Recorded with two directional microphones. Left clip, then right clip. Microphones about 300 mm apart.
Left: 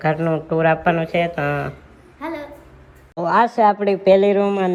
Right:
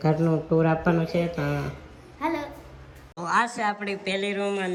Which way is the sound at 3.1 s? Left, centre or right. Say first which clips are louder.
Left 9 dB; centre.